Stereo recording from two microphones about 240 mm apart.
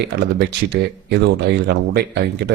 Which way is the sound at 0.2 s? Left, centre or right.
Right.